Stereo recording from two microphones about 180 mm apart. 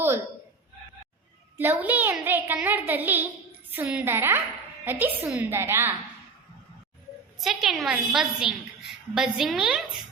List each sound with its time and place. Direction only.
1.5 s a child's voice: 10° right (ahead or behind)
7.3 s a woman's voice: centre (ahead or behind)